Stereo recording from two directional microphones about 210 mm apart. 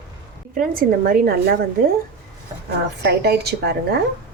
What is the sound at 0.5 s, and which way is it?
A woman's voice, 45° right (ahead or behind).